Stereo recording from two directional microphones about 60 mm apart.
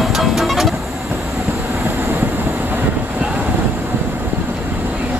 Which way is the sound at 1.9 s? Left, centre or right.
Right.